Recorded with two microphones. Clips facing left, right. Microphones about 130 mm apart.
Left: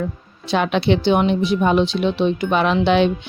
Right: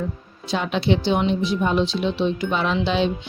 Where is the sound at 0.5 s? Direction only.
70° left (ahead or behind).